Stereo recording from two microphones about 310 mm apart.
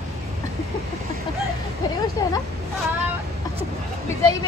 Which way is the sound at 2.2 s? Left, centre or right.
Centre.